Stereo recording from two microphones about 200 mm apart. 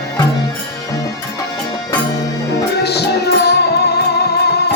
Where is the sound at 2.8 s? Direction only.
55° left (ahead or behind).